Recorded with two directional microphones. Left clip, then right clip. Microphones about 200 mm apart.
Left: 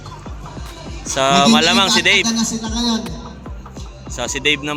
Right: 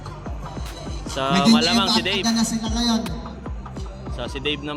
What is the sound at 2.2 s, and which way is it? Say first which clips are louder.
Speech: left 2 dB; 25° right (ahead or behind).